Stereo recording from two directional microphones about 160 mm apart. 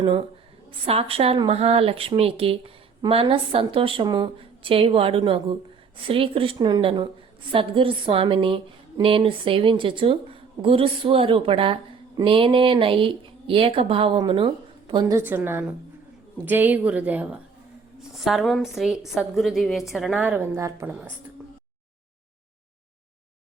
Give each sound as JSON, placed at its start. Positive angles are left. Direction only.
{"t": 0.0, "sound": "a woman's voice", "side_deg": -30}